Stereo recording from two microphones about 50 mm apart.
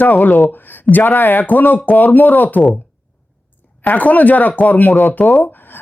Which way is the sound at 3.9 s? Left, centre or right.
Left.